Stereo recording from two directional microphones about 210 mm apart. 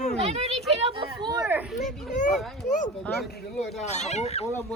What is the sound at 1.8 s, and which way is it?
Speech, 35° left (ahead or behind).